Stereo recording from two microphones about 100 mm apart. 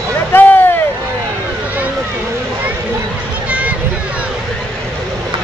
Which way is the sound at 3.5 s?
15° right (ahead or behind).